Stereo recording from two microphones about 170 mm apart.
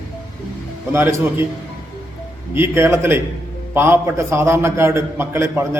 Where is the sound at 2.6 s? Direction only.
15° right (ahead or behind).